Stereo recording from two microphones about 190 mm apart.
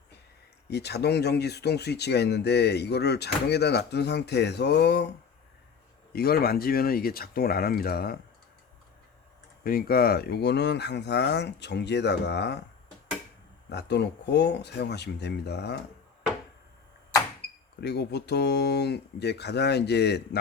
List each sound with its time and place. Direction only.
0.7 s speech: 60° left (ahead or behind)
6.1 s speech: 55° left (ahead or behind)
9.6 s speech: 50° left (ahead or behind)
13.7 s speech: 60° left (ahead or behind)
17.7 s speech: 60° left (ahead or behind)